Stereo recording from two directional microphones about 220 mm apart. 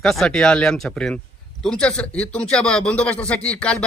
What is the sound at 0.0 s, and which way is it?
A man's voice, 5° left (ahead or behind).